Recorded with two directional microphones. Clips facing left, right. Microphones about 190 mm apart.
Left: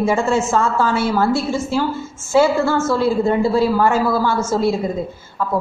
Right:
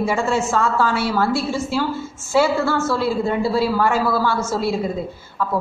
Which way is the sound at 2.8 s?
45° left (ahead or behind).